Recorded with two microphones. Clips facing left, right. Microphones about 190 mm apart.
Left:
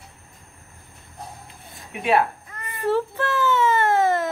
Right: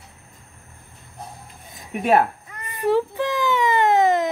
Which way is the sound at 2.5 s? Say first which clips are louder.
Right 3 dB; 15° right (ahead or behind).